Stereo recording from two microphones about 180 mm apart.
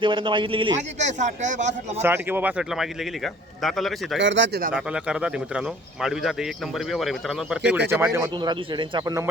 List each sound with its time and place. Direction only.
0.0 s speech: 30° right (ahead or behind)
0.9 s a man's voice: 40° right (ahead or behind)
2.0 s speech: 10° right (ahead or behind)
4.2 s speech: 90° right
4.7 s speech: 5° right (ahead or behind)
8.4 s speech: 25° right (ahead or behind)